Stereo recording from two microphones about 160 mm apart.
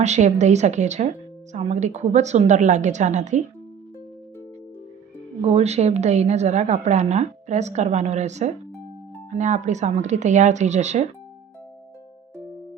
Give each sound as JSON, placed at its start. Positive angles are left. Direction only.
{"t": 0.0, "sound": "a woman's voice", "side_deg": -45}
{"t": 5.4, "sound": "a woman's voice", "side_deg": -40}